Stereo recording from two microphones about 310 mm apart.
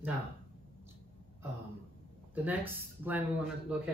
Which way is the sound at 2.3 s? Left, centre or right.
Centre.